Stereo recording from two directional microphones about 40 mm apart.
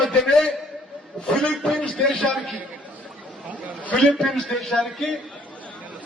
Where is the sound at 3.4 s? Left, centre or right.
Right.